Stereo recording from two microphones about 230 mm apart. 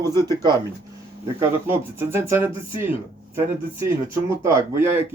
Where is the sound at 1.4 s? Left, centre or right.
Centre.